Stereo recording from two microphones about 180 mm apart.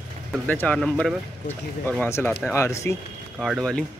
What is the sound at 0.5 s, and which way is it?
Speech, 10° left (ahead or behind).